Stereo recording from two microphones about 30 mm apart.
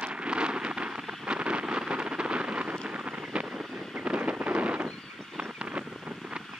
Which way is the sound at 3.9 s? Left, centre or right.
Right.